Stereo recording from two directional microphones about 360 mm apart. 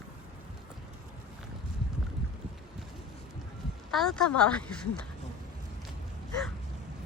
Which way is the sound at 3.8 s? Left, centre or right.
Centre.